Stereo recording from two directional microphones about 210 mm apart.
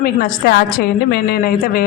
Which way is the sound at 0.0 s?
45° left (ahead or behind).